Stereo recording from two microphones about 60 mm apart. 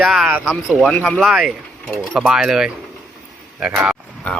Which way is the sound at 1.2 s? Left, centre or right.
Centre.